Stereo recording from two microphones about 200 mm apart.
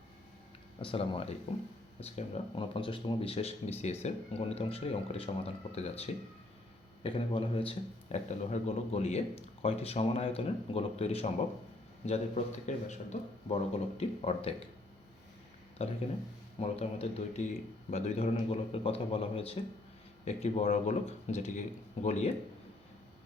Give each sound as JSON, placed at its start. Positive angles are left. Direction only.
{"t": 0.8, "sound": "speech", "side_deg": 25}
{"t": 15.8, "sound": "speech", "side_deg": 30}